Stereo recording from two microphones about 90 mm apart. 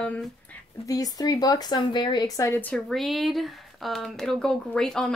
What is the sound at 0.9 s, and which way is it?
Speech, 40° left (ahead or behind).